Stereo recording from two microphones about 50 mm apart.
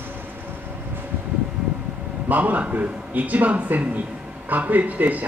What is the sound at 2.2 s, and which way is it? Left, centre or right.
Speech, right.